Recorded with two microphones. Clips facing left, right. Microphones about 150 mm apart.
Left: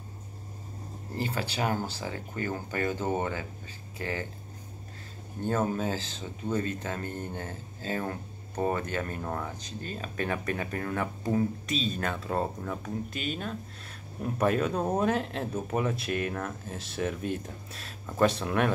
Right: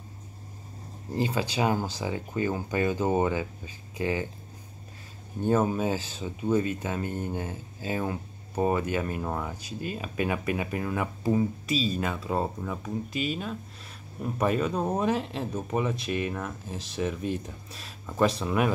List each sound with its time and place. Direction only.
1.1 s speech: 15° right (ahead or behind)
5.4 s speech: 15° right (ahead or behind)